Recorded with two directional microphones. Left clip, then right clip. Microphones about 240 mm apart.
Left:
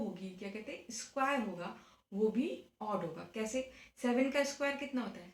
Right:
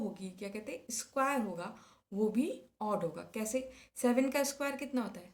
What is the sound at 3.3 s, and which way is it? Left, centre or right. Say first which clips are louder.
A woman's voice: right 1 dB; right.